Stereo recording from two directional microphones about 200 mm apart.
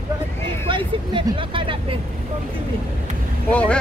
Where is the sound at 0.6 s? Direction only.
25° right (ahead or behind).